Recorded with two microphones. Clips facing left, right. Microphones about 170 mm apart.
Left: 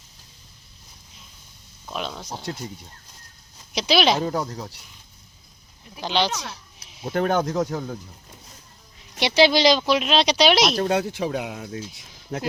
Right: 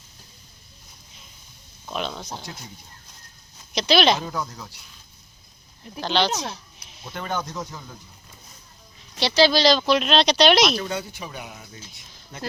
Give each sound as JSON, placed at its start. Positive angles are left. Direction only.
{"t": 1.9, "sound": "speech", "side_deg": 0}
{"t": 3.8, "sound": "speech", "side_deg": 5}
{"t": 4.2, "sound": "speech", "side_deg": 40}
{"t": 6.0, "sound": "speech", "side_deg": 10}
{"t": 7.0, "sound": "speech", "side_deg": 55}
{"t": 9.1, "sound": "speech", "side_deg": 20}
{"t": 10.8, "sound": "speech", "side_deg": 80}